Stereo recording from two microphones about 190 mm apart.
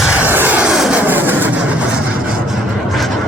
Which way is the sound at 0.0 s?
5° right (ahead or behind).